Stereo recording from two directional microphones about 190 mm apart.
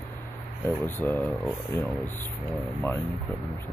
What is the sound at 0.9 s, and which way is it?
Speech, 10° left (ahead or behind).